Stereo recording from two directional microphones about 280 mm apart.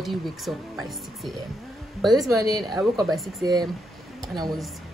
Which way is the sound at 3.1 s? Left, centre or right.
Centre.